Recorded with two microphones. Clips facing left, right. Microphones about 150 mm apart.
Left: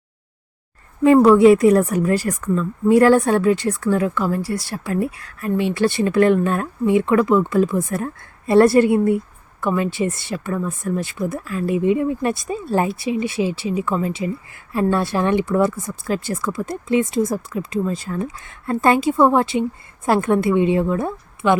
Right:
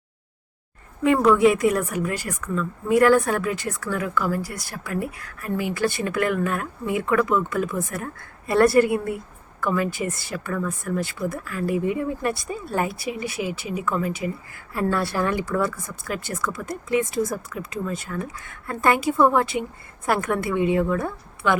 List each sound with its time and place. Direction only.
1.0 s speech: 35° left (ahead or behind)